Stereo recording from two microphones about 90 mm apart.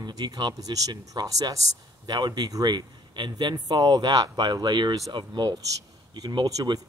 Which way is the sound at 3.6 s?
50° right (ahead or behind).